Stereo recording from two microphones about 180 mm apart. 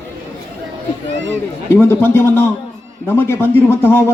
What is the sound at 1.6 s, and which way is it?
A man's voice, 15° left (ahead or behind).